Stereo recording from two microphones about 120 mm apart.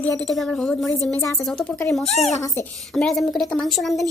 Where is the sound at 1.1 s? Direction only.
20° left (ahead or behind).